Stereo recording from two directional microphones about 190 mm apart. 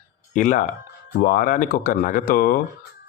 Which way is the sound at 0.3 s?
45° left (ahead or behind).